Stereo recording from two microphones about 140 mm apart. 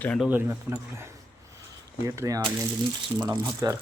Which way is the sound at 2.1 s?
25° right (ahead or behind).